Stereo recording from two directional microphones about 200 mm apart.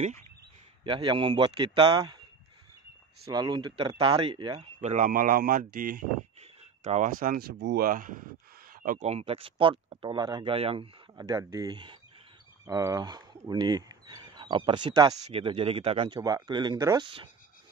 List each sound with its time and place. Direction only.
0.8 s speech: 25° right (ahead or behind)
3.3 s speech: 20° right (ahead or behind); by 5.9 s 45° right (ahead or behind)
6.4 s a sound: 35° right (ahead or behind)
7.5 s speech: 65° right (ahead or behind)
7.8 s speech: 40° right (ahead or behind); by 17.3 s 25° right (ahead or behind)